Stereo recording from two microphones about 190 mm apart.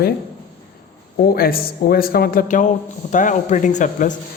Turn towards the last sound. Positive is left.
turn(degrees=40)  # may be behind; listen again after turning